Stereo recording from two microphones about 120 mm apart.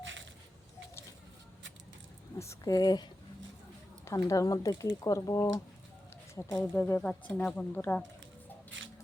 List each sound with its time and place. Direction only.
2.4 s speech: 25° left (ahead or behind)